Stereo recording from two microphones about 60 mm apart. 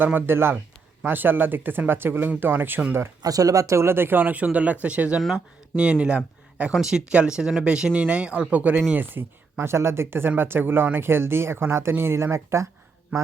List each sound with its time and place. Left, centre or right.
0.0 s speech: right
3.2 s speech: right; by 6.7 s centre
6.7 s speech: centre
8.9 s speech: right